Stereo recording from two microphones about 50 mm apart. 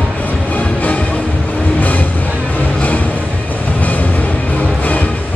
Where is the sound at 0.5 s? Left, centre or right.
Left.